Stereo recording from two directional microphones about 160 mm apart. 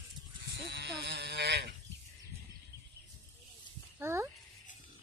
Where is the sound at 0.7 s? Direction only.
90° right.